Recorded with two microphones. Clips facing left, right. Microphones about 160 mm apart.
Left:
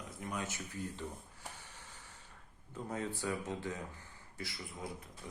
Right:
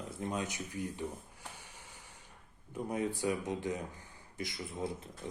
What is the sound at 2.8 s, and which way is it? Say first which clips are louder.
Speech: right 5 dB; 15° right (ahead or behind).